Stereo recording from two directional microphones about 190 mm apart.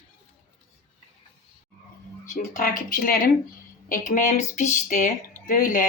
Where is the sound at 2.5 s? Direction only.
45° left (ahead or behind).